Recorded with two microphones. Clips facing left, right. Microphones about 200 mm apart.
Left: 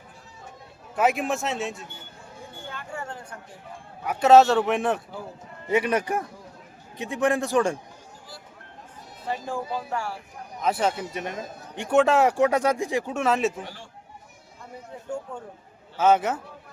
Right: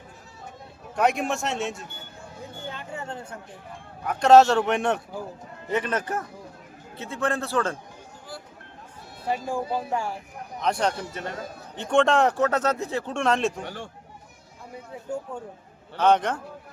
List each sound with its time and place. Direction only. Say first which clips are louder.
0.9 s speech: even; 5° left (ahead or behind)
2.6 s a sound: right 1 dB; 20° right (ahead or behind)
4.0 s speech: even; 5° left (ahead or behind)
9.3 s speech: right 3 dB; 15° right (ahead or behind)
10.6 s speech: left 1 dB; 5° left (ahead or behind)
11.2 s speech: left 1 dB; 15° left (ahead or behind)
11.9 s speech: left 1 dB; 5° left (ahead or behind)
13.7 s speech: right 6 dB; 55° right (ahead or behind)
16.0 s speech: even; 5° left (ahead or behind)